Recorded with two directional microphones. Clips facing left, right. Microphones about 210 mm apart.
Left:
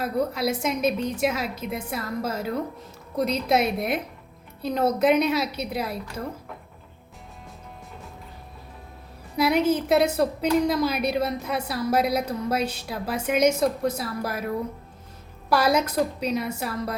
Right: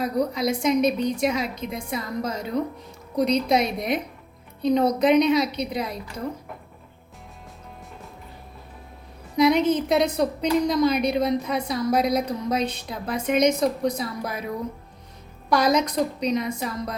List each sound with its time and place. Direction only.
0.0 s a woman's voice: 5° left (ahead or behind)
9.3 s a woman's voice: 5° left (ahead or behind)